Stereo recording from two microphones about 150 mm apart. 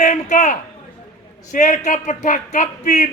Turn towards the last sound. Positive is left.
turn(degrees=55)  # may be behind; listen again after turning